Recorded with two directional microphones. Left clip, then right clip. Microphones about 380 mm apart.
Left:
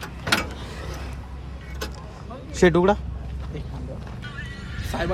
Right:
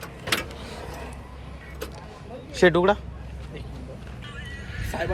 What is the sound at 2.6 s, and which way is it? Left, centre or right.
Speech, centre.